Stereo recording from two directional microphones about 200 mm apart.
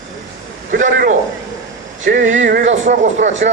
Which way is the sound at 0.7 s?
40° right (ahead or behind).